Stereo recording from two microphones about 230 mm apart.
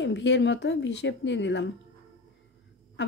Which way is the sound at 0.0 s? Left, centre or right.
Left.